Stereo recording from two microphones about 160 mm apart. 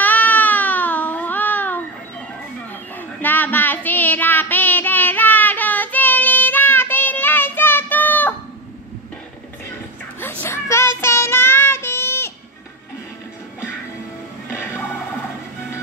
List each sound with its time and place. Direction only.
0.0 s baby cry: 10° left (ahead or behind)
3.0 s child singing: 10° left (ahead or behind)
10.4 s child singing: 15° left (ahead or behind)
14.5 s music: 15° left (ahead or behind)